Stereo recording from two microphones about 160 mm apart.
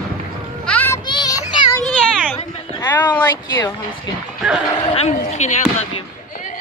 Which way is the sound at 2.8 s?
25° left (ahead or behind).